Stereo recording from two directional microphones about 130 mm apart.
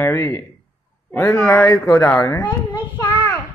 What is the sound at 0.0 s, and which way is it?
Mantra, 20° left (ahead or behind).